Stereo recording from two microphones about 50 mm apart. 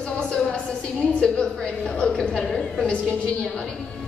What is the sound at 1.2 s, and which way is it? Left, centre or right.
A woman's voice, centre.